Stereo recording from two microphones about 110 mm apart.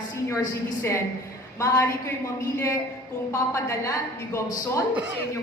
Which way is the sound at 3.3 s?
30° left (ahead or behind).